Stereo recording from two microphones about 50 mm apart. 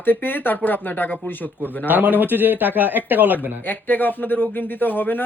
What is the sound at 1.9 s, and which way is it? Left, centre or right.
Speech, right.